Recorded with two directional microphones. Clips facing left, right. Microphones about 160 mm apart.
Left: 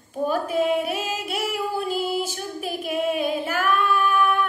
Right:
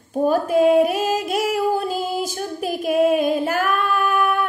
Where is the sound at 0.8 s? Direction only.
40° right (ahead or behind).